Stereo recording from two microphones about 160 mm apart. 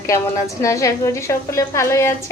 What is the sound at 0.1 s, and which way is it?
A woman's voice, 20° left (ahead or behind).